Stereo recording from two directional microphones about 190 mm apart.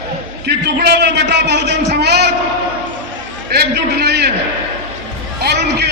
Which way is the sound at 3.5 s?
60° right (ahead or behind).